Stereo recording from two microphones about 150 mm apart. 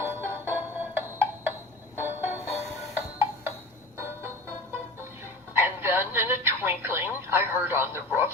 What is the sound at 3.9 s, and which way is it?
Music, 15° right (ahead or behind).